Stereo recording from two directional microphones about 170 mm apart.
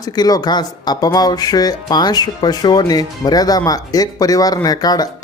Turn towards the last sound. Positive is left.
turn(degrees=20)  # may be behind; listen again after turning